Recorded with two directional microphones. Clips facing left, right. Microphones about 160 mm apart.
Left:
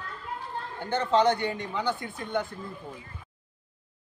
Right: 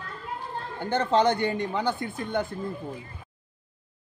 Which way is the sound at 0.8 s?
45° right (ahead or behind).